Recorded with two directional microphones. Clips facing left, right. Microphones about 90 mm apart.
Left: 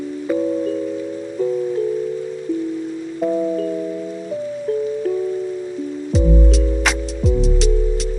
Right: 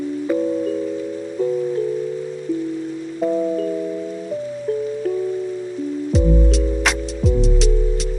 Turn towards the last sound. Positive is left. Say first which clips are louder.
# even
turn(degrees=0)  # may be behind; listen again after turning